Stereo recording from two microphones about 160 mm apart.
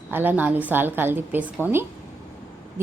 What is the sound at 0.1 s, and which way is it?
Speech, 10° right (ahead or behind).